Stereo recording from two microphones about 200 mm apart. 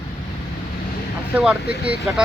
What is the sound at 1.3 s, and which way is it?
Speech, centre (ahead or behind).